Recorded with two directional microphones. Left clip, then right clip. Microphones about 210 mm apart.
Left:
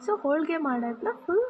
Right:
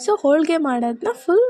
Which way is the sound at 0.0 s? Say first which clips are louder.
Right 9 dB; 35° right (ahead or behind).